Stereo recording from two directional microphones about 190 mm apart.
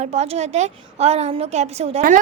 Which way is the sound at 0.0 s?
35° right (ahead or behind).